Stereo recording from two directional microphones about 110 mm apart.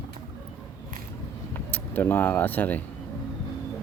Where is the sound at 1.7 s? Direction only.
20° left (ahead or behind).